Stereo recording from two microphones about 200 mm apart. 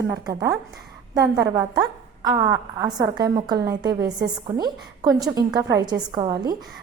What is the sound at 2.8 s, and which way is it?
A woman's voice, 20° right (ahead or behind).